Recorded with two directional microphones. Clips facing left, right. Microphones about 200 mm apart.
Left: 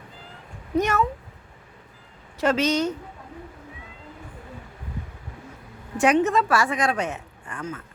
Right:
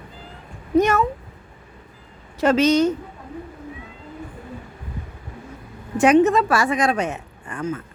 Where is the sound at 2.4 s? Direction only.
20° right (ahead or behind).